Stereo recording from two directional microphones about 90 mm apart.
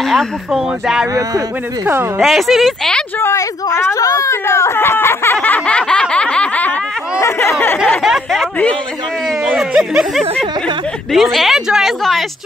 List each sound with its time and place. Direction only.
0.0 s a sound: 5° left (ahead or behind)
0.5 s speech: 5° right (ahead or behind)
2.1 s speech: centre (ahead or behind)
3.2 s speech: 30° left (ahead or behind)
3.9 s speech: 40° left (ahead or behind); by 6.7 s 15° left (ahead or behind)
7.2 s speech: 30° left (ahead or behind)
8.0 s speech: centre (ahead or behind)
9.5 s speech: 5° right (ahead or behind)